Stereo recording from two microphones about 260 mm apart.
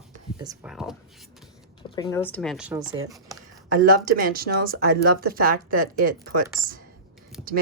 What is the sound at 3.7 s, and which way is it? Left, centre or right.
Speech, right.